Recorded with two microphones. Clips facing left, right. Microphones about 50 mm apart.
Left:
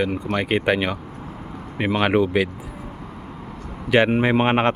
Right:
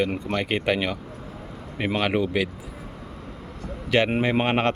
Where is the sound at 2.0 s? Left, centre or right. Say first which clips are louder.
Left 5 dB; centre.